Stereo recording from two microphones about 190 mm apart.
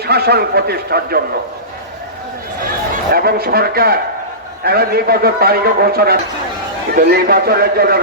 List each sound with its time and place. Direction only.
0.0 s a man's voice: 55° right (ahead or behind)
3.1 s a man's voice: 55° right (ahead or behind)